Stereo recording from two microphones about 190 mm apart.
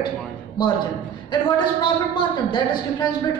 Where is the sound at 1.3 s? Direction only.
25° left (ahead or behind).